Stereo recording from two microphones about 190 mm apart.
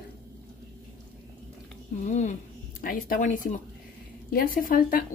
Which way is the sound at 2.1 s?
40° left (ahead or behind).